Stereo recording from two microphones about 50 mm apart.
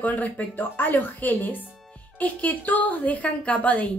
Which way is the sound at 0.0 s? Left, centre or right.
Left.